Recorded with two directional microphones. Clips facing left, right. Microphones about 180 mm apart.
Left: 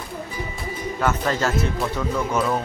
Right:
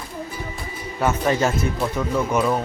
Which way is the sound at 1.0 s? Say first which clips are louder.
Right 3 dB; 15° right (ahead or behind).